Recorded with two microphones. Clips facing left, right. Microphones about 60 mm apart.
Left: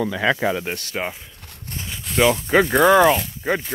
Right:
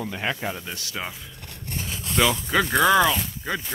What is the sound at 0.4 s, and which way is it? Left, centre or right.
Speech, left.